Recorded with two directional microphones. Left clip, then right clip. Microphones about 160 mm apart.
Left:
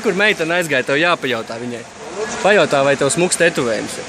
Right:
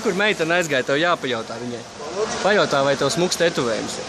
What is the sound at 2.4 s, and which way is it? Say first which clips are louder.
Speech: left 5 dB; 30° left (ahead or behind).